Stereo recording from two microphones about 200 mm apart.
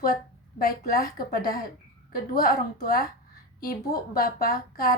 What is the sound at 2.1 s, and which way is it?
A woman's voice, 45° left (ahead or behind).